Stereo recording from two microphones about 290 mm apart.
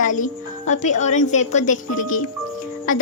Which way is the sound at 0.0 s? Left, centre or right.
Left.